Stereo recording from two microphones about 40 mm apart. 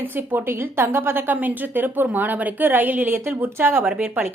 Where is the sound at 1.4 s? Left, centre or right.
Right.